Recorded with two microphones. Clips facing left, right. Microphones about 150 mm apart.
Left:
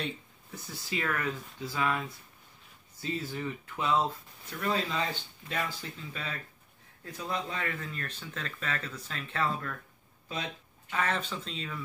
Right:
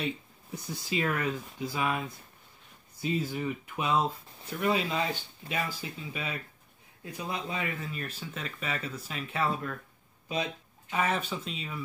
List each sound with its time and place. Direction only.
0.5 s speech: 20° right (ahead or behind)